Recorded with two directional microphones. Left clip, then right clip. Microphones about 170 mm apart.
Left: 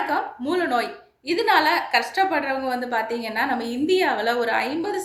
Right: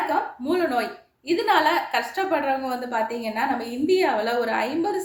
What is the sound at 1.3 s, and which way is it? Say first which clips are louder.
A woman's voice: left 1 dB; 20° left (ahead or behind).